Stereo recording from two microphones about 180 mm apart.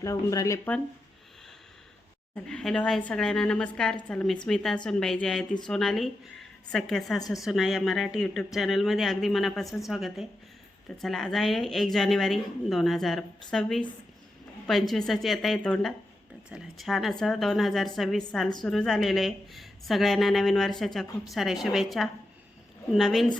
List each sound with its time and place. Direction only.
0.0 s speech: 20° left (ahead or behind)
2.3 s a woman's voice: 5° left (ahead or behind)